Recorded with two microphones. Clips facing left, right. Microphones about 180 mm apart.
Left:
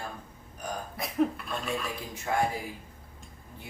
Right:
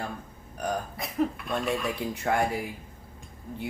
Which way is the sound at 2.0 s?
65° right (ahead or behind).